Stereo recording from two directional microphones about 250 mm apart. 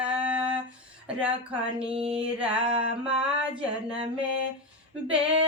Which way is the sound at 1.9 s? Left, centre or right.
Right.